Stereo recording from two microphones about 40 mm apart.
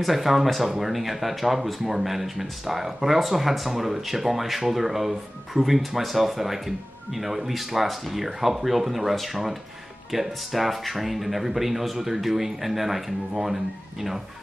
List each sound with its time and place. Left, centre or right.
0.0 s speech: centre